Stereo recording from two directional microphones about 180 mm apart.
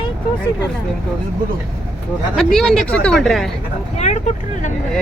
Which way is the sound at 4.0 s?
40° left (ahead or behind).